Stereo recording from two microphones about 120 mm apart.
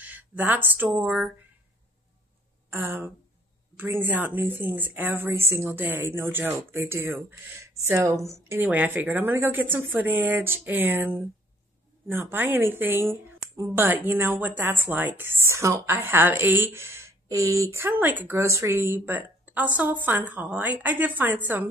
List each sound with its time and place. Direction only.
0.0 s speech: 15° right (ahead or behind)
2.7 s a woman's voice: 20° right (ahead or behind)